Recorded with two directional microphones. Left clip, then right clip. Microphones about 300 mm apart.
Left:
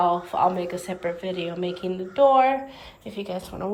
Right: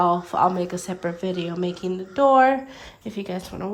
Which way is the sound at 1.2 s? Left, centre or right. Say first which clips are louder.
Right 1 dB; centre.